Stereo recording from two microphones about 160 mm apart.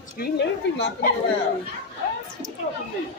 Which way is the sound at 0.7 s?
90° left.